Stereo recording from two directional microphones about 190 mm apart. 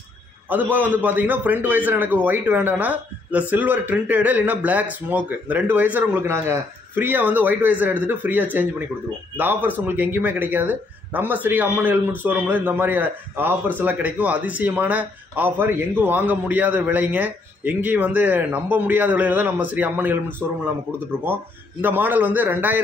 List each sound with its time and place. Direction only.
0.5 s a man's voice: 10° right (ahead or behind)
21.8 s a man's voice: 10° right (ahead or behind)